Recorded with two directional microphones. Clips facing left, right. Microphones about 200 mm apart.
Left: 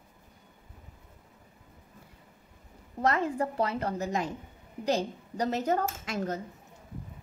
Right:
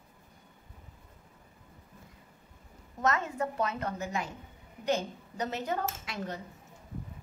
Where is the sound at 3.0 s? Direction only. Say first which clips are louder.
Left 3 dB; 30° left (ahead or behind).